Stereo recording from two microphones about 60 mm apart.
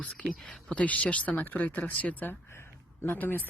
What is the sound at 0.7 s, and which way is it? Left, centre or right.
Speech, left.